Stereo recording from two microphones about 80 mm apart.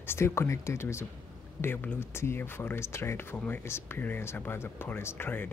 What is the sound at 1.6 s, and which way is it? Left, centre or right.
Speech, left.